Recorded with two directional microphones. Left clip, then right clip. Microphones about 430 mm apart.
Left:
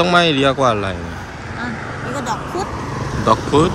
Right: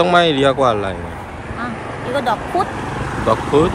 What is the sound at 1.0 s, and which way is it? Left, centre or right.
Speech, centre.